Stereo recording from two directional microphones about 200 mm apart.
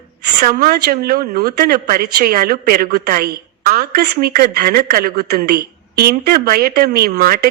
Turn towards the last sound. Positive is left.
turn(degrees=-45)  # may be behind; listen again after turning